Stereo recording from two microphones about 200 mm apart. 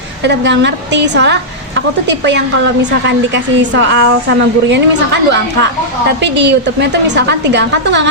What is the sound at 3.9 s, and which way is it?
Speech, 60° right (ahead or behind).